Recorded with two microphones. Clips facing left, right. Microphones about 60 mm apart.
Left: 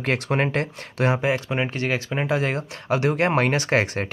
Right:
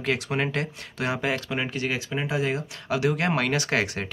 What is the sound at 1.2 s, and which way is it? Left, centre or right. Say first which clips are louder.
Speech: left 4 dB; left.